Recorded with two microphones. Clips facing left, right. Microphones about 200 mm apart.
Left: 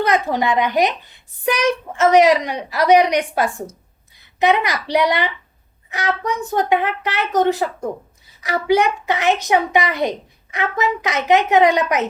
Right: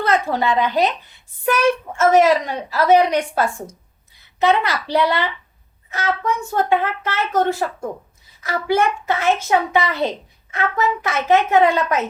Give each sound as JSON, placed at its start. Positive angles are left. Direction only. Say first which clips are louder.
{"t": 0.0, "sound": "a child's voice", "louder": "left 1 dB", "side_deg": 15}